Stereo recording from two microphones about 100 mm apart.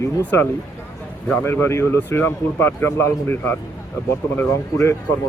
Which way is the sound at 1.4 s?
25° left (ahead or behind).